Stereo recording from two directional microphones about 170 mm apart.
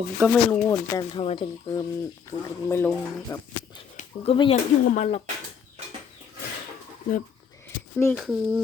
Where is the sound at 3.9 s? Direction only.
45° left (ahead or behind).